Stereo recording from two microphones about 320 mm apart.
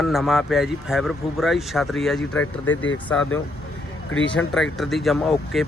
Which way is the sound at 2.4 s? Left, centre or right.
Left.